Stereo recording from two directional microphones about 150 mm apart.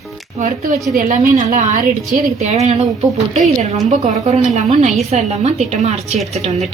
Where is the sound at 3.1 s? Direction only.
Centre (ahead or behind).